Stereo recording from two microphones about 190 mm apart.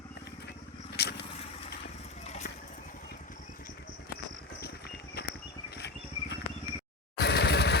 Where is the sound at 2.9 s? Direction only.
45° left (ahead or behind).